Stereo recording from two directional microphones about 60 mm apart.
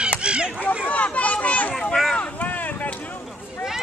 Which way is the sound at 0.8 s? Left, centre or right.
Left.